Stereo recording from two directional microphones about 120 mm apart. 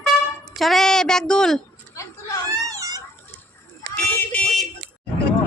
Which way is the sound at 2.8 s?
30° right (ahead or behind).